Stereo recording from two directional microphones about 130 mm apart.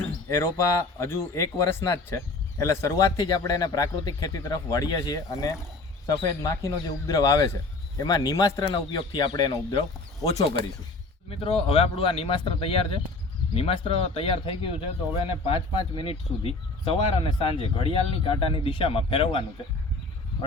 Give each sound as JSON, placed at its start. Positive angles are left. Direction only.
{"t": 0.3, "sound": "a man's voice", "side_deg": 25}
{"t": 11.3, "sound": "speech", "side_deg": 45}